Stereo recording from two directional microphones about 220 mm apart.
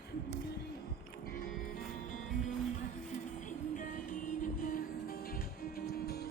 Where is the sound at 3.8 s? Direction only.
40° left (ahead or behind).